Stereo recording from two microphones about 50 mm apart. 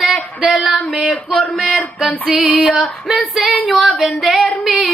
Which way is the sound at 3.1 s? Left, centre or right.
Centre.